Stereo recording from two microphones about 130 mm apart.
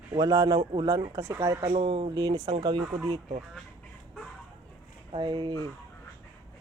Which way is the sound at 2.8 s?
25° right (ahead or behind).